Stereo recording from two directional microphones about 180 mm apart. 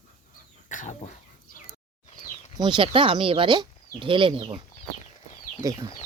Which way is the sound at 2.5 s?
25° right (ahead or behind).